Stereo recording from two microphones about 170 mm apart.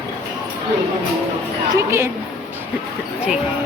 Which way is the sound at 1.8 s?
15° right (ahead or behind).